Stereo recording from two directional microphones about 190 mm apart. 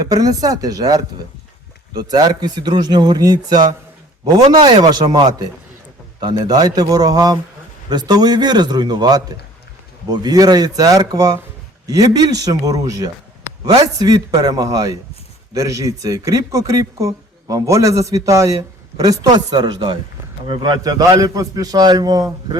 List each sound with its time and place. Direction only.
0.0 s a man's voice: 20° right (ahead or behind)